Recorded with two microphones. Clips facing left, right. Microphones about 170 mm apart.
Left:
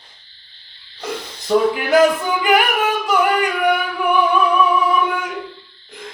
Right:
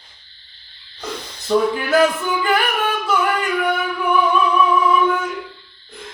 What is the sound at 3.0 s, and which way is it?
Music, 15° left (ahead or behind).